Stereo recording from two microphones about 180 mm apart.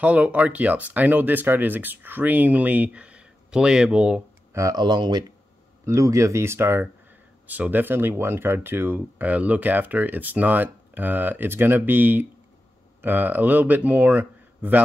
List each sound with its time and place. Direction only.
0.0 s speech: 10° right (ahead or behind)
4.6 s speech: 20° right (ahead or behind)